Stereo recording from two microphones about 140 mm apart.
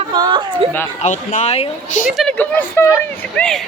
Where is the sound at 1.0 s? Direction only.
60° left (ahead or behind).